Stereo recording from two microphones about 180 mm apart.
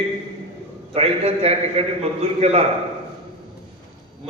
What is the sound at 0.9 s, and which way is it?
A man's voice, 35° right (ahead or behind).